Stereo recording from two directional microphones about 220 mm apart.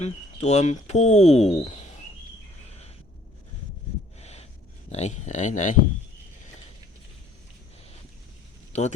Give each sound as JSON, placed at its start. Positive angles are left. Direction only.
{"t": 0.0, "sound": "speech", "side_deg": 30}
{"t": 4.2, "sound": "a sound", "side_deg": 30}
{"t": 4.9, "sound": "speech", "side_deg": 30}
{"t": 8.7, "sound": "speech", "side_deg": 30}